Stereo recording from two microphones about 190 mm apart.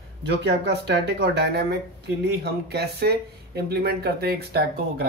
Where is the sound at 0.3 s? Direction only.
65° right (ahead or behind).